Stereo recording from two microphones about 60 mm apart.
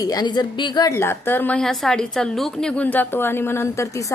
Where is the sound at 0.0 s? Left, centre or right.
Left.